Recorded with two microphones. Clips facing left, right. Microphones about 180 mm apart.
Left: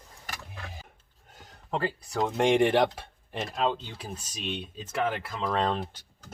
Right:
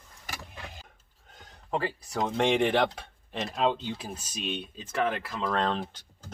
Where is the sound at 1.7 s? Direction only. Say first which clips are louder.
Even; centre (ahead or behind).